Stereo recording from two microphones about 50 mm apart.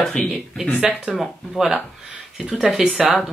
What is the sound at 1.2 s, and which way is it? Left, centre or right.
Speech, centre.